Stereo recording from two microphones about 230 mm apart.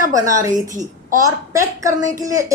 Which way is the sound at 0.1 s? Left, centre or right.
Centre.